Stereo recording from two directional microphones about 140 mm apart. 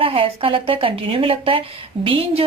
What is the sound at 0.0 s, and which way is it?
A woman's voice, 40° right (ahead or behind).